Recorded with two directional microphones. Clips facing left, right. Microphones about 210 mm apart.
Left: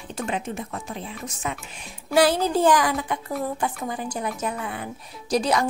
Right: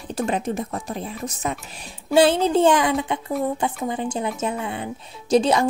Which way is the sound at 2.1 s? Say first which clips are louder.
Right 3 dB; 25° right (ahead or behind).